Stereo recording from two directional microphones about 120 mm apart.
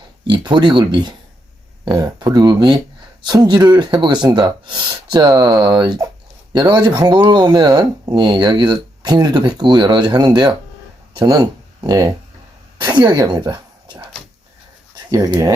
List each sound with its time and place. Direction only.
0.3 s speech: 40° right (ahead or behind)
12.8 s a sound: 40° right (ahead or behind)
15.1 s speech: 30° right (ahead or behind)